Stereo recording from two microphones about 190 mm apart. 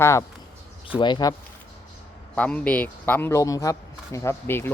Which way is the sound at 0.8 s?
25° left (ahead or behind).